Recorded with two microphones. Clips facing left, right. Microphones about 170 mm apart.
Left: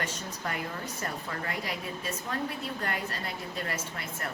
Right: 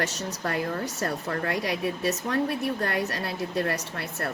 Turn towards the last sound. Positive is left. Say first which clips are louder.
# right 5 dB
turn(degrees=-65)  # may be behind; listen again after turning